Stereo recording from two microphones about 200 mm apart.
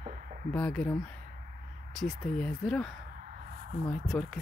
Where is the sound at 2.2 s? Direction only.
5° left (ahead or behind).